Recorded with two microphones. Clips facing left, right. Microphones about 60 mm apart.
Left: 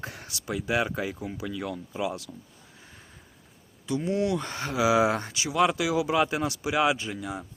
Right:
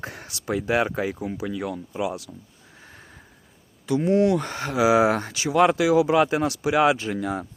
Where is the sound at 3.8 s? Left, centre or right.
Right.